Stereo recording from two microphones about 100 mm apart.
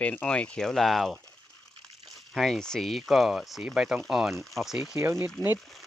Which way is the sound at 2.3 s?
5° left (ahead or behind).